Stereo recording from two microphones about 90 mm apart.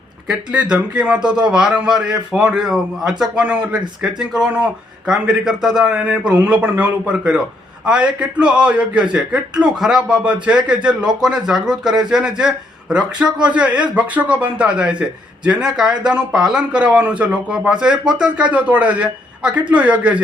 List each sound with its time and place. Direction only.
0.3 s a man's voice: 10° right (ahead or behind)